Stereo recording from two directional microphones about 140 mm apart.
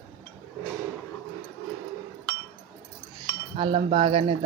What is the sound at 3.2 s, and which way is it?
Cutlery, 35° right (ahead or behind).